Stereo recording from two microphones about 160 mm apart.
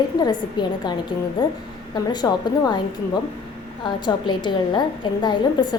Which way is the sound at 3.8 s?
30° left (ahead or behind).